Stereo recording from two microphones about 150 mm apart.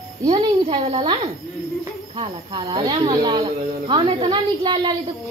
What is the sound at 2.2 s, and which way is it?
Speech, 30° right (ahead or behind).